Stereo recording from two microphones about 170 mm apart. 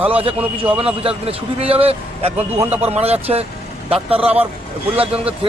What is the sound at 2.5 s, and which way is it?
Speech, 10° right (ahead or behind).